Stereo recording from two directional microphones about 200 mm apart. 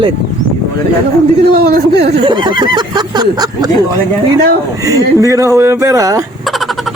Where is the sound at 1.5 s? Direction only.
50° right (ahead or behind).